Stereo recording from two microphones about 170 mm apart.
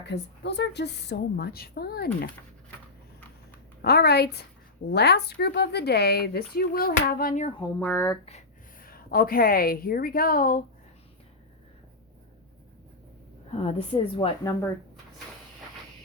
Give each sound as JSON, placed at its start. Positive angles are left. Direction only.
{"t": 0.0, "sound": "a woman's voice", "side_deg": 85}
{"t": 3.8, "sound": "a woman's voice", "side_deg": 70}
{"t": 7.8, "sound": "speech", "side_deg": 10}
{"t": 8.2, "sound": "speech", "side_deg": 40}
{"t": 8.8, "sound": "a woman's voice", "side_deg": 60}
{"t": 13.5, "sound": "a woman's voice", "side_deg": 35}